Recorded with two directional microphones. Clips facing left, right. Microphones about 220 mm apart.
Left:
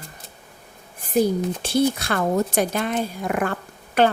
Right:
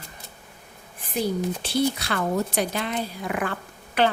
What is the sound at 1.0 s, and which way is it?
Speech, 45° left (ahead or behind).